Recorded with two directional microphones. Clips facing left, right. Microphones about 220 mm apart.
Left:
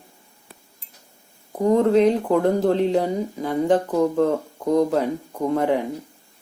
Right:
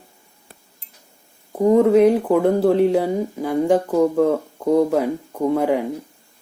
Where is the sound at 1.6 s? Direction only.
10° right (ahead or behind).